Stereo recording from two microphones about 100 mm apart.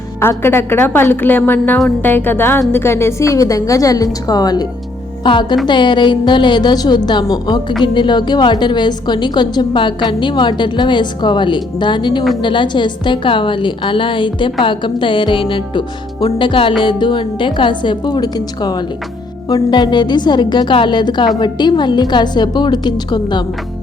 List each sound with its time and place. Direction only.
0.2 s a woman's voice: 25° left (ahead or behind); by 23.4 s 45° left (ahead or behind)